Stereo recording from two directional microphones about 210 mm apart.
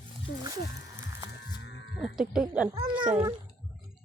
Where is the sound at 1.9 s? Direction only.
5° right (ahead or behind).